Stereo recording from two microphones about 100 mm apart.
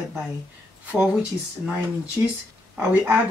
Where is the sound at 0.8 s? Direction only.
15° right (ahead or behind).